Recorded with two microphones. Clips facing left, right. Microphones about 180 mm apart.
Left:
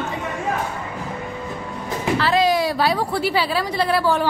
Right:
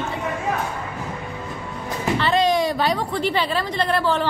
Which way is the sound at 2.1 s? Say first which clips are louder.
Left 1 dB; 5° left (ahead or behind).